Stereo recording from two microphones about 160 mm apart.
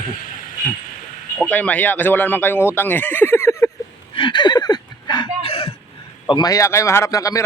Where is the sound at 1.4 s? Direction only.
10° left (ahead or behind).